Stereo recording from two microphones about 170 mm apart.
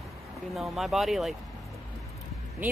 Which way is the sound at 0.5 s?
Centre (ahead or behind).